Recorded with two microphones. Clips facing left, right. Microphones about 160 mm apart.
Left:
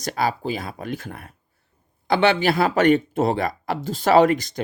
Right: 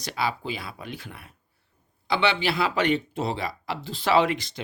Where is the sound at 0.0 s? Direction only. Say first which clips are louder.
Left 5 dB; 45° left (ahead or behind).